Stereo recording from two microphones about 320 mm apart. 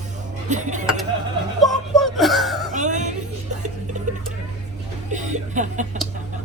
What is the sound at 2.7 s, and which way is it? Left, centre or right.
Speech, right.